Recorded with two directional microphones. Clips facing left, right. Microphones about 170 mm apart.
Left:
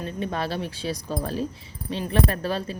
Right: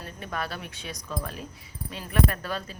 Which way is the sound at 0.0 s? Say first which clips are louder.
Left 6 dB; 25° left (ahead or behind).